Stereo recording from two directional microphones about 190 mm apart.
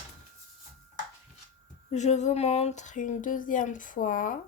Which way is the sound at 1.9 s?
35° left (ahead or behind).